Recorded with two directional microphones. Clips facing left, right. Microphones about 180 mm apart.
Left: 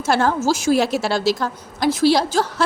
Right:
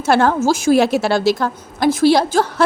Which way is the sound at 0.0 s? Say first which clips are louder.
Right 4 dB; 60° right (ahead or behind).